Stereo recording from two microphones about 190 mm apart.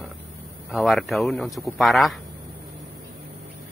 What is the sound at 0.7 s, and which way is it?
Speech, centre (ahead or behind).